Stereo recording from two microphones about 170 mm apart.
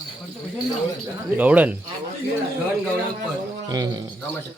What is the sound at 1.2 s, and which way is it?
Speech, 10° right (ahead or behind).